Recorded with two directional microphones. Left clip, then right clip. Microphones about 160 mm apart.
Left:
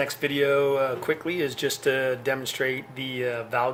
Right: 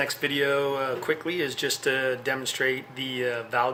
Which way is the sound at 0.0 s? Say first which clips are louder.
Left 1 dB; 20° left (ahead or behind).